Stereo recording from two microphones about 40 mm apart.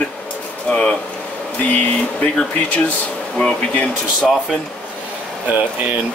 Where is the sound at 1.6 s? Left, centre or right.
Left.